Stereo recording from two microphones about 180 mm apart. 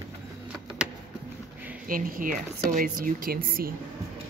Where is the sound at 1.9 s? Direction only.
50° right (ahead or behind).